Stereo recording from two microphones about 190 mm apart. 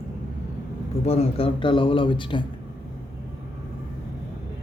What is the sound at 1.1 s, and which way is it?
Speech, 30° left (ahead or behind).